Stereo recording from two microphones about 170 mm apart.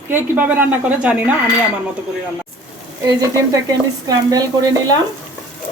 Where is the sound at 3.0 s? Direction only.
20° right (ahead or behind).